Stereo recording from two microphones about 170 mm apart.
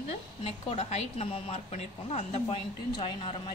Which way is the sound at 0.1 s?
40° left (ahead or behind).